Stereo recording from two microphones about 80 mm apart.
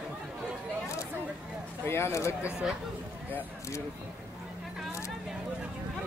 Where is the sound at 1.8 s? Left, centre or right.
Left.